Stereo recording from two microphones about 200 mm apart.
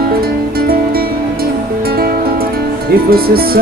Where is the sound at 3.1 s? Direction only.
50° right (ahead or behind).